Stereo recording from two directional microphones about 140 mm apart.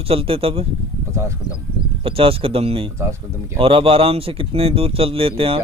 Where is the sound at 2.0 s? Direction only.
40° right (ahead or behind).